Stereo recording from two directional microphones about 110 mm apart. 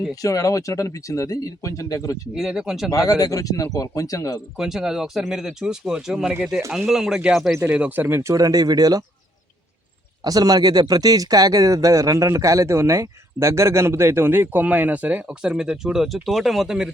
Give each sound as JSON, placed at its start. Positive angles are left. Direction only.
{"t": 0.2, "sound": "speech", "side_deg": 30}
{"t": 2.3, "sound": "speech", "side_deg": -5}
{"t": 2.9, "sound": "speech", "side_deg": 30}
{"t": 4.5, "sound": "speech", "side_deg": -5}
{"t": 7.6, "sound": "speech", "side_deg": -15}
{"t": 10.2, "sound": "speech", "side_deg": -35}